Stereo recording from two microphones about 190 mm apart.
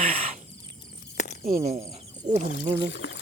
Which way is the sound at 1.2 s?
40° left (ahead or behind).